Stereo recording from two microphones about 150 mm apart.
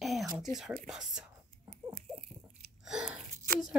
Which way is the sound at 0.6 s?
5° right (ahead or behind).